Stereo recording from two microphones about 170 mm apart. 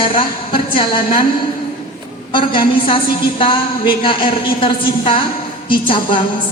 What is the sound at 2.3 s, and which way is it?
A woman's voice, 30° left (ahead or behind).